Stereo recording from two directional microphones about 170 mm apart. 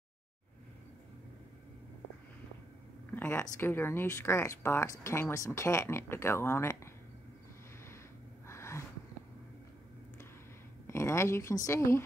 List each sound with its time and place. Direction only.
3.2 s speech: 15° left (ahead or behind)
8.5 s gasp: 15° left (ahead or behind)
10.9 s a woman's voice: 15° left (ahead or behind)